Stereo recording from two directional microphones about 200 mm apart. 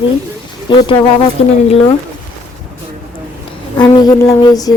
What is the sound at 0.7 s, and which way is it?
Speech, 20° left (ahead or behind).